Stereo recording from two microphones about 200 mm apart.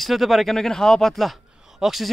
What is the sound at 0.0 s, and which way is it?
Speech, centre (ahead or behind).